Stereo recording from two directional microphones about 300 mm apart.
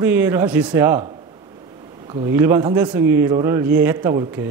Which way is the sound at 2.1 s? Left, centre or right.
Centre.